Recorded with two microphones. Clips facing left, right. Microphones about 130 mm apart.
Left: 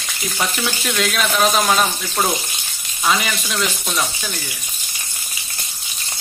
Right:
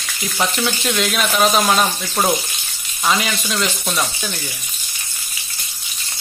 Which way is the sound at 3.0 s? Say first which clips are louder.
Even; 5° right (ahead or behind).